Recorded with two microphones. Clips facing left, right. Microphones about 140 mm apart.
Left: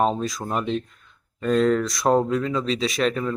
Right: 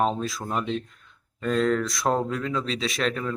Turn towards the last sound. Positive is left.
turn(degrees=10)  # may be behind; listen again after turning